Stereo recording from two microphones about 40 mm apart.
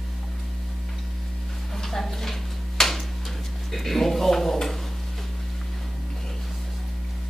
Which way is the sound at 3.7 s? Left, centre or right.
Centre.